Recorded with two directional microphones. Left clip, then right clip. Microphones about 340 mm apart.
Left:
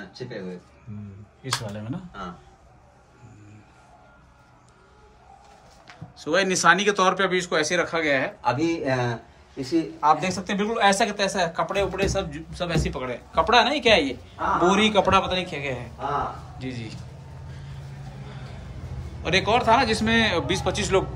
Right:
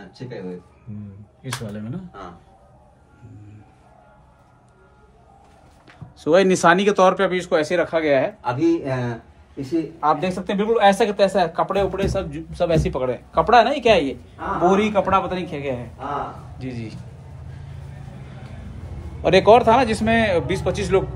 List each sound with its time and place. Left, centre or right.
1.4 s speech: centre
6.1 s speech: centre
8.4 s speech: left
9.9 s speech: centre
19.2 s speech: centre